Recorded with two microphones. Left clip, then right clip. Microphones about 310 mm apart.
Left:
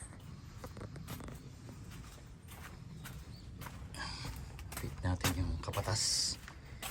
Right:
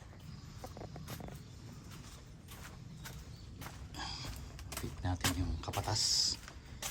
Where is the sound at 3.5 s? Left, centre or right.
Centre.